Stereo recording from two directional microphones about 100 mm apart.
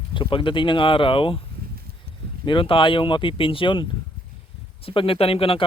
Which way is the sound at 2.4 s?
60° left (ahead or behind).